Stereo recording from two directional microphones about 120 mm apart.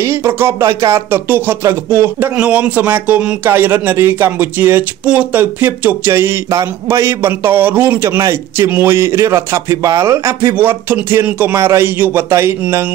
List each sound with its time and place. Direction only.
0.0 s speech: 20° right (ahead or behind)